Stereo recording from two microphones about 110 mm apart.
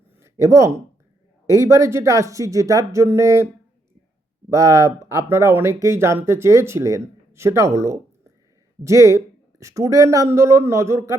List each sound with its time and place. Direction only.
0.2 s speech: 30° right (ahead or behind)